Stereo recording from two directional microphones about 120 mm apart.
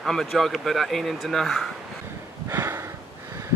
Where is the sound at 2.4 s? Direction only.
20° right (ahead or behind).